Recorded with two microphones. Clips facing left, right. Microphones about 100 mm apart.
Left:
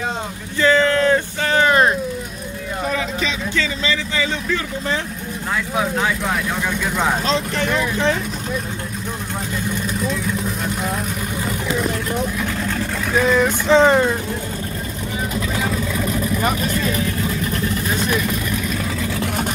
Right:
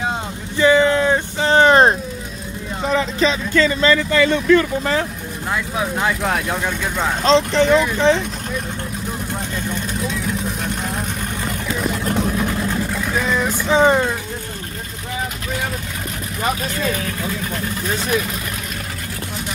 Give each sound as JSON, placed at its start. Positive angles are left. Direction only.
{"t": 0.6, "sound": "a sound", "side_deg": -15}
{"t": 1.5, "sound": "a sound", "side_deg": -30}
{"t": 2.9, "sound": "speech", "side_deg": -40}
{"t": 7.2, "sound": "speech", "side_deg": -25}
{"t": 12.4, "sound": "vehicle", "side_deg": -20}
{"t": 13.2, "sound": "vehicle", "side_deg": 0}